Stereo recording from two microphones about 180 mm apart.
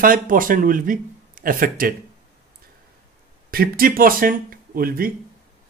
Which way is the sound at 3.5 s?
55° right (ahead or behind).